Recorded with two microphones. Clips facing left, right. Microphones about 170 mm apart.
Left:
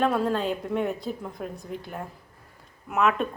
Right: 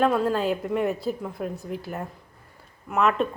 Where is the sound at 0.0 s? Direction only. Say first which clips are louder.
Right 2 dB; centre (ahead or behind).